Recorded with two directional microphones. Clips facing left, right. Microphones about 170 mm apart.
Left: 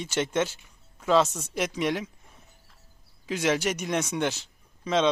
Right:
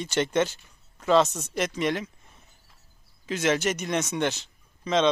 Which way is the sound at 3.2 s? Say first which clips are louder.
Right 1 dB; 10° left (ahead or behind).